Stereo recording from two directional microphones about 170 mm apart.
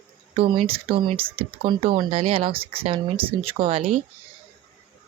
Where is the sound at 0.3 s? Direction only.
30° right (ahead or behind).